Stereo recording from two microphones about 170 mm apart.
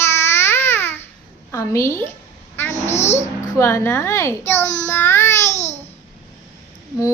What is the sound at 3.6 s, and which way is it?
A child's voice, 15° left (ahead or behind).